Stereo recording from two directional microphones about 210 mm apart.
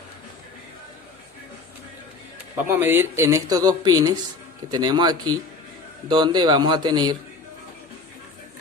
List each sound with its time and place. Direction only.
2.6 s a man's voice: 10° right (ahead or behind)